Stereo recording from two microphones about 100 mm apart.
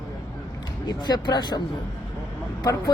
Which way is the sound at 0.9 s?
45° left (ahead or behind).